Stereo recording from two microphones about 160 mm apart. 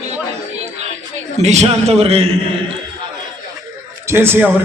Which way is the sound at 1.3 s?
45° right (ahead or behind).